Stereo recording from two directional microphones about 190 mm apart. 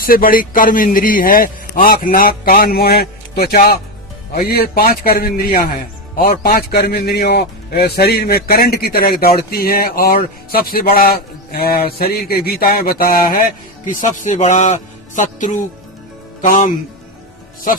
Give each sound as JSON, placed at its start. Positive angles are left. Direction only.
{"t": 0.0, "sound": "a man's voice", "side_deg": 50}